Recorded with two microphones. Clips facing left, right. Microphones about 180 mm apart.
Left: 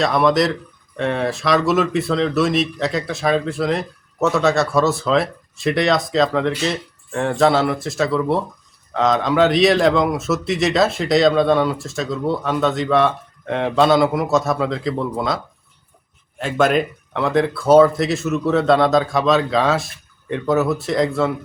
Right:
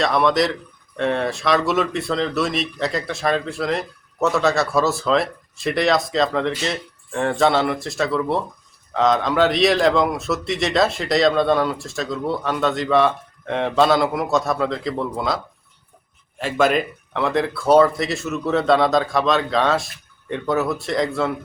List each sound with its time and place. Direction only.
0.0 s a man's voice: centre (ahead or behind)
16.4 s a man's voice: centre (ahead or behind)